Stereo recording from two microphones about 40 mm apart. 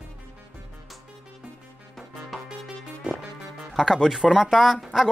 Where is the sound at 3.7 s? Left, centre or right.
Centre.